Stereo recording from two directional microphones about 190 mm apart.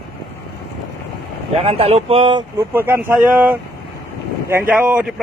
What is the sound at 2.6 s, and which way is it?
Speech, 10° right (ahead or behind).